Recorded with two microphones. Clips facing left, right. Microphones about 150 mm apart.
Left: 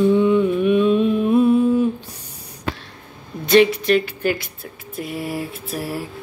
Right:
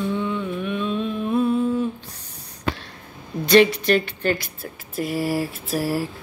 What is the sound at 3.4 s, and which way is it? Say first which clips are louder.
Mantra: left 1 dB; centre (ahead or behind).